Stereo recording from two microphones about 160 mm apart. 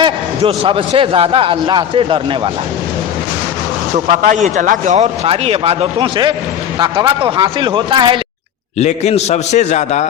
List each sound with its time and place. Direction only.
0.0 s a man's voice: 35° right (ahead or behind)
3.9 s a man's voice: 50° right (ahead or behind); by 8.2 s 30° right (ahead or behind)
8.8 s a man's voice: 45° left (ahead or behind)